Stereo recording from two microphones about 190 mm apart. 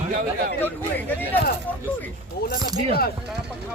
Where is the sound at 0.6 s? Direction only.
10° left (ahead or behind).